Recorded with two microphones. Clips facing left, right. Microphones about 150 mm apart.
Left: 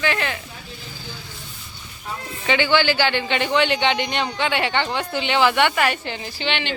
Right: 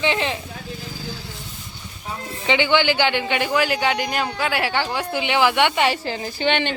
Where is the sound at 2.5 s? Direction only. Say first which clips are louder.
Even; 15° right (ahead or behind).